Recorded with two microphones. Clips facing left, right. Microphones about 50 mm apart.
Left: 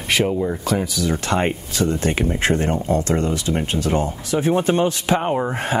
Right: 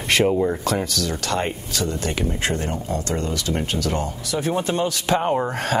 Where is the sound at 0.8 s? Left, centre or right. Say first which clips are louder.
Left 2 dB; centre.